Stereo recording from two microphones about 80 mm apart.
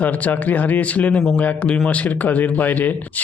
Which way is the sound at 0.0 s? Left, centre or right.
Left.